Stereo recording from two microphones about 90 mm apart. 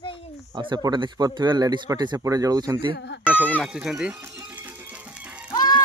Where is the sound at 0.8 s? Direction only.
50° right (ahead or behind).